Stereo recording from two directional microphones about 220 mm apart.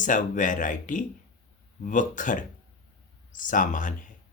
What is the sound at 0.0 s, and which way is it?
Speech, 35° left (ahead or behind).